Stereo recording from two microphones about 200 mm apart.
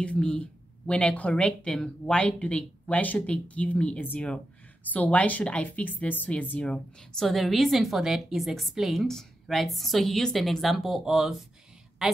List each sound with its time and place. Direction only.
0.0 s speech: 5° left (ahead or behind)